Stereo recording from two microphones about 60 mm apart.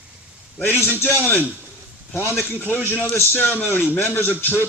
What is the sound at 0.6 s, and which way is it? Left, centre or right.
A man's voice, left.